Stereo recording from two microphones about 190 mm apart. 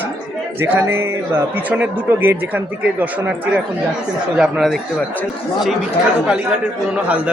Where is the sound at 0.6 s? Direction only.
15° right (ahead or behind).